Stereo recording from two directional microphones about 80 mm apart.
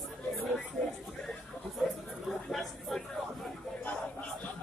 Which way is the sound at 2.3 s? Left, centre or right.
Centre.